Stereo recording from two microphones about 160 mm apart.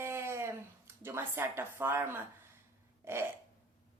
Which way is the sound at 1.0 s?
15° right (ahead or behind).